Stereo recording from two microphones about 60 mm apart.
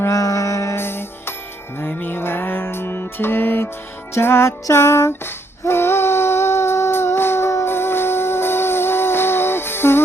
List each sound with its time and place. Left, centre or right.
0.1 s music: left
0.8 s music: left
4.7 s female singing: left
7.2 s music: left